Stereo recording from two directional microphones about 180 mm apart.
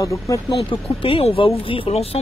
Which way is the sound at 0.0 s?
15° left (ahead or behind).